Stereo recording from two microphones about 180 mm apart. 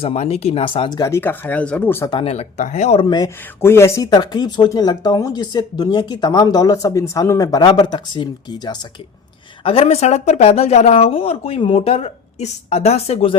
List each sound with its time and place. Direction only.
0.0 s speech: 35° left (ahead or behind); by 2.0 s 10° left (ahead or behind)
2.0 s speech: 30° left (ahead or behind)
9.6 s speech: 35° left (ahead or behind)